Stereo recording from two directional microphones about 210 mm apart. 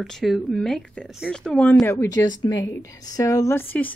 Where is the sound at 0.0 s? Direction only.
Centre (ahead or behind).